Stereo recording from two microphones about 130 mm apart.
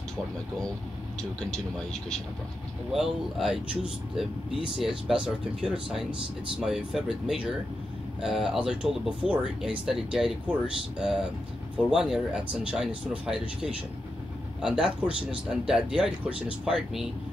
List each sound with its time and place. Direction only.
2.9 s speech: centre (ahead or behind)